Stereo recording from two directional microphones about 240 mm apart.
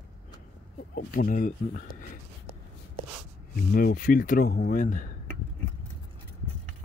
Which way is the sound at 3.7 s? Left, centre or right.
Left.